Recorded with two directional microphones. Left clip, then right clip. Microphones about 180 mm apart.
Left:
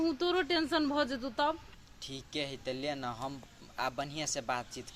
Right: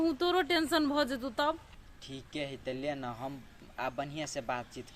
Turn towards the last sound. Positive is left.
turn(degrees=0)  # may be behind; listen again after turning